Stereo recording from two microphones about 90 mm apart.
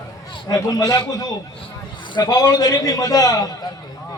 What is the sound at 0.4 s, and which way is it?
A man's voice, 45° left (ahead or behind).